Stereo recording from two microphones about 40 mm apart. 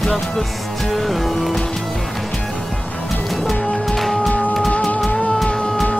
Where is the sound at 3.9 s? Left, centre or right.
Centre.